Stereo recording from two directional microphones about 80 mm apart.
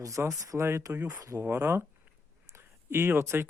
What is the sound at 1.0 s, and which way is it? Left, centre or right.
Speech, right.